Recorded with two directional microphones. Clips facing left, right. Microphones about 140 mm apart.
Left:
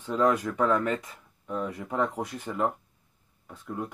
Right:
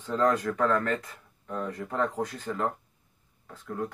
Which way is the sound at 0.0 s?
10° left (ahead or behind).